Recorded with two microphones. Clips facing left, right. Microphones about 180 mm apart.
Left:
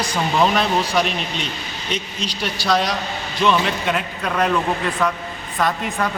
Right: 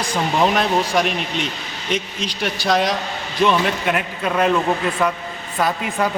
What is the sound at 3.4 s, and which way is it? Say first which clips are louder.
Speech: right 1 dB; 10° right (ahead or behind).